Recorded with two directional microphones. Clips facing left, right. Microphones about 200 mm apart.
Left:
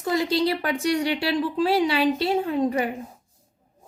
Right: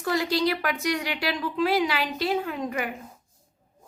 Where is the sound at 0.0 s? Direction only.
25° left (ahead or behind).